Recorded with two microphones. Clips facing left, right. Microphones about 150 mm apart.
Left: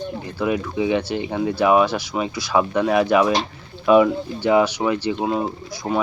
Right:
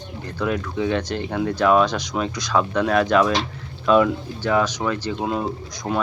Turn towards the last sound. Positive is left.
turn(degrees=20)  # may be behind; listen again after turning